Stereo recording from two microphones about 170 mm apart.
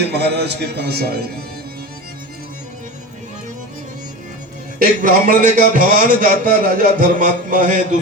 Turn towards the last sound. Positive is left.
turn(degrees=-50)  # may be behind; listen again after turning